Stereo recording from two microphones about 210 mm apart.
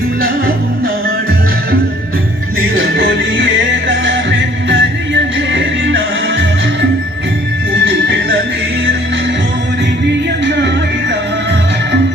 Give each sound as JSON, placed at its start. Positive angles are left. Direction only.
{"t": 2.7, "sound": "music", "side_deg": -65}
{"t": 7.9, "sound": "music", "side_deg": -55}
{"t": 10.4, "sound": "music", "side_deg": -60}